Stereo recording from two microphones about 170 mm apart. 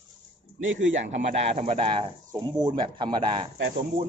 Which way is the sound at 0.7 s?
90° right.